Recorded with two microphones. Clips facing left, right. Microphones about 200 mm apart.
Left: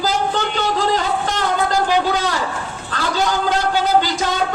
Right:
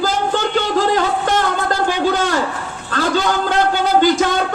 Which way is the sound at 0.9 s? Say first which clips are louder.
Right 4 dB; 50° right (ahead or behind).